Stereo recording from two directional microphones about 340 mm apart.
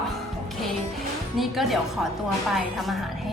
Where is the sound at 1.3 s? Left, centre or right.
Centre.